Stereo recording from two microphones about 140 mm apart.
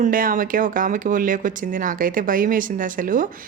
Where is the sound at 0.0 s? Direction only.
85° right.